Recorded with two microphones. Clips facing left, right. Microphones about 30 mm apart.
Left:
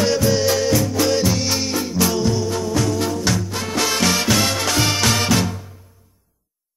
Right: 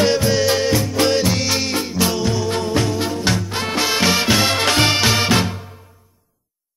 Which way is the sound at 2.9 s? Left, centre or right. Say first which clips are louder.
Even; right.